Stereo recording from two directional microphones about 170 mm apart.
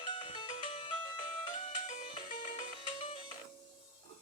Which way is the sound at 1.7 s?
45° left (ahead or behind).